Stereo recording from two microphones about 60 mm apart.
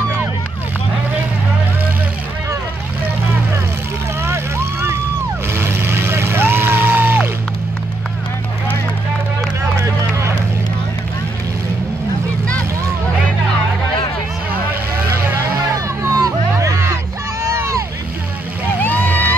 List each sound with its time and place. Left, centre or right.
5.5 s vehicle: right
9.8 s vehicle: right
16.0 s music: right
17.4 s vehicle: right
18.8 s vehicle: left